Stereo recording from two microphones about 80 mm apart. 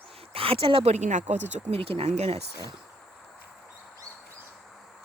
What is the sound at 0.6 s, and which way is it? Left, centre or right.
Speech, right.